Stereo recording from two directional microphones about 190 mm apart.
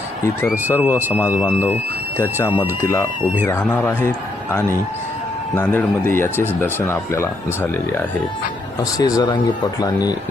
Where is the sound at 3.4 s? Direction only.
10° left (ahead or behind).